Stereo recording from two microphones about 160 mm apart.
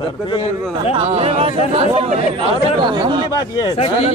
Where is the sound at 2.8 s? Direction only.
25° right (ahead or behind).